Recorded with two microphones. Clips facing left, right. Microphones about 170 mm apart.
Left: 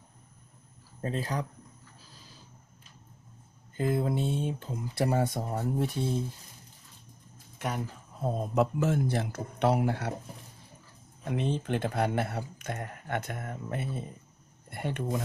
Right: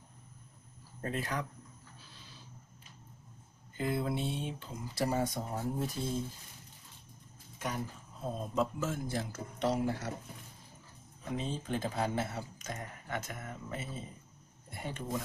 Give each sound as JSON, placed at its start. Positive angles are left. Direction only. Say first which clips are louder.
{"t": 1.0, "sound": "speech", "louder": "left 4 dB", "side_deg": 30}
{"t": 3.8, "sound": "speech", "louder": "left 5 dB", "side_deg": 45}
{"t": 8.5, "sound": "speech", "louder": "left 7 dB", "side_deg": 65}
{"t": 11.3, "sound": "speech", "louder": "left 6 dB", "side_deg": 65}